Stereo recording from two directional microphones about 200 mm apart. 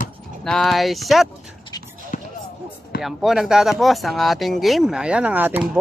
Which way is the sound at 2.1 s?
40° left (ahead or behind).